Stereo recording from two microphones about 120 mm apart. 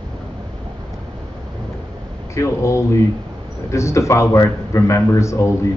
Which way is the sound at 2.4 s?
25° left (ahead or behind).